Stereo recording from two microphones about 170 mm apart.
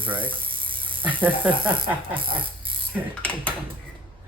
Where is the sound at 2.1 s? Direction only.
30° right (ahead or behind).